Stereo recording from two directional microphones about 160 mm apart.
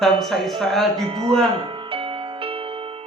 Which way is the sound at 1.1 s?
35° right (ahead or behind).